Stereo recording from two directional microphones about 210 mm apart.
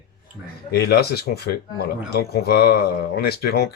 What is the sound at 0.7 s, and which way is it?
Speech, 50° left (ahead or behind).